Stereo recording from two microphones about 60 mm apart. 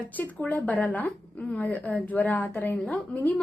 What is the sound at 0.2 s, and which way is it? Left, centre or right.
Speech, left.